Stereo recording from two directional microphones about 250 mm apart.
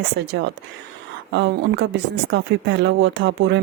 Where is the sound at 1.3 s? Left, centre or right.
Right.